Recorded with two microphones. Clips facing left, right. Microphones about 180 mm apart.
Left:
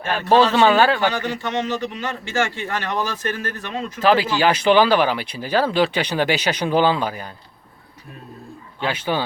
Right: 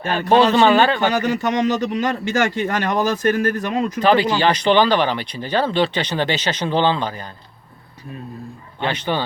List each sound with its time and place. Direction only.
0.5 s speech: 5° left (ahead or behind)
1.2 s speech: 40° right (ahead or behind)
4.0 s speech: 5° left (ahead or behind)
8.8 s speech: 5° left (ahead or behind)